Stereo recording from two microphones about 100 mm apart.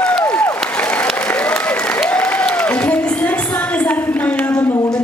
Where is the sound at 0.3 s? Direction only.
15° left (ahead or behind).